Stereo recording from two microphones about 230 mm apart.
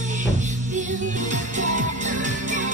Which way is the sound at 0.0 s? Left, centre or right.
Right.